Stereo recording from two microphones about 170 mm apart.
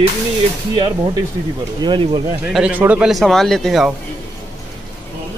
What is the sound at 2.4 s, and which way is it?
Speech, 5° right (ahead or behind).